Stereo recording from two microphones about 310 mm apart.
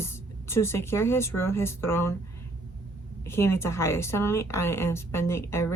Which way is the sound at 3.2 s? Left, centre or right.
Centre.